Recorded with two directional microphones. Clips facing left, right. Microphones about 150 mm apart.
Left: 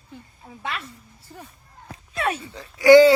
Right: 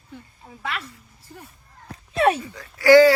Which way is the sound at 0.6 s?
25° left (ahead or behind).